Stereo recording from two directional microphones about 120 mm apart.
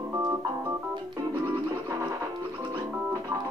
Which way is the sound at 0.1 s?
30° right (ahead or behind).